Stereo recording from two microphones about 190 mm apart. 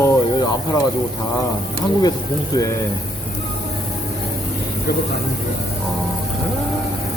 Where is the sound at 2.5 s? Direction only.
15° left (ahead or behind).